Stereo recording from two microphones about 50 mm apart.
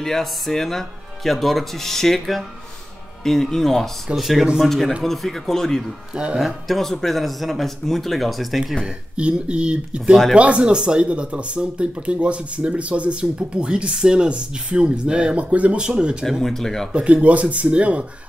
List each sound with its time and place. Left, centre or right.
0.0 s speech: centre
6.1 s speech: centre
6.4 s speech: centre
8.8 s speech: right
16.3 s speech: centre
16.9 s speech: right